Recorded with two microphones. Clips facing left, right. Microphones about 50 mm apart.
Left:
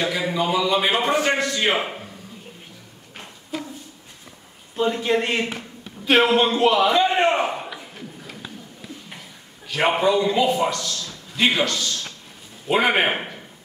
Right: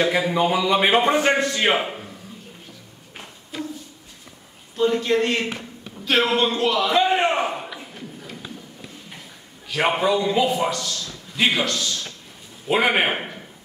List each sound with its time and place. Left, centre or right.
0.3 s speech: right
1.8 s a man's voice: centre
4.7 s a man's voice: centre
6.9 s a sound: centre
9.7 s a man's voice: centre